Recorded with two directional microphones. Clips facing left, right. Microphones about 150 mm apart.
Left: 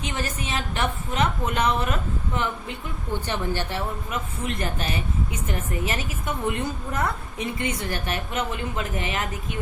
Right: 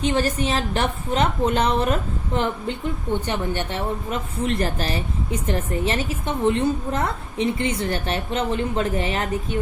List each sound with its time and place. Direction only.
0.0 s a woman's voice: 35° right (ahead or behind)
3.1 s a woman's voice: 20° right (ahead or behind)
4.4 s a woman's voice: 35° right (ahead or behind)